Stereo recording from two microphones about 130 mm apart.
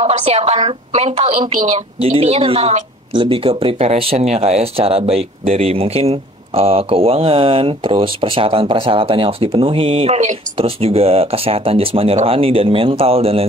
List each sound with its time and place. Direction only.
0.0 s a woman's voice: 55° right (ahead or behind); by 1.8 s 75° right (ahead or behind)
2.0 s speech: 50° right (ahead or behind)